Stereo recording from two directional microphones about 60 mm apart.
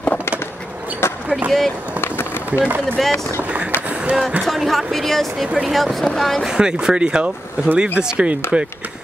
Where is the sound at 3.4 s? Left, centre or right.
Right.